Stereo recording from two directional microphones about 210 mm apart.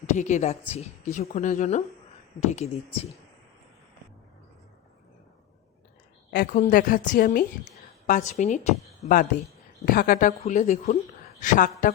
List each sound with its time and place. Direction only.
0.1 s a woman's voice: 35° left (ahead or behind)
6.3 s a woman's voice: 45° left (ahead or behind)